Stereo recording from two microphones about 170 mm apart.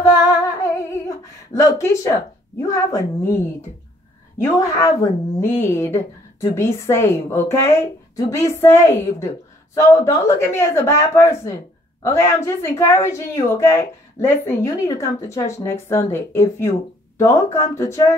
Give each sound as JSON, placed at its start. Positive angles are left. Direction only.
{"t": 0.4, "sound": "female singing", "side_deg": 20}
{"t": 2.6, "sound": "a woman's voice", "side_deg": 20}
{"t": 4.6, "sound": "a woman's voice", "side_deg": 20}